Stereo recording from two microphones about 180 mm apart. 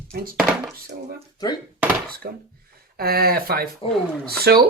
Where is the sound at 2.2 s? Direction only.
50° right (ahead or behind).